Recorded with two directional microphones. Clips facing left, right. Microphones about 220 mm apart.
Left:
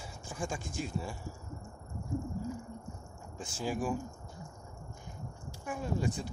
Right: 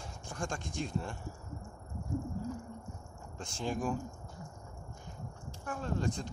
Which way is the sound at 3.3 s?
5° left (ahead or behind).